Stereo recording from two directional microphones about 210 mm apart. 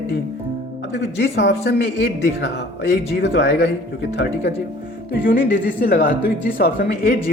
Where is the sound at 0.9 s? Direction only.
55° left (ahead or behind).